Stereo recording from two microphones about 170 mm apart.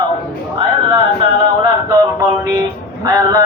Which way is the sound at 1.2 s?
30° right (ahead or behind).